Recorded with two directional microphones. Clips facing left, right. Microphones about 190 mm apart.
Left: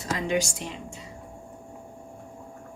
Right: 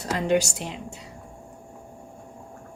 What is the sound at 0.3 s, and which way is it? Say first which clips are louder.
Speech: right 3 dB; 70° right (ahead or behind).